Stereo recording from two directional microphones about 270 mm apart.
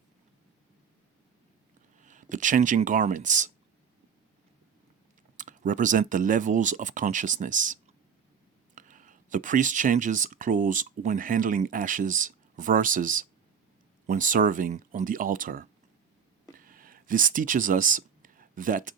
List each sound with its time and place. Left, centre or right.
2.0 s speech: right
5.4 s speech: right
16.6 s a sound: right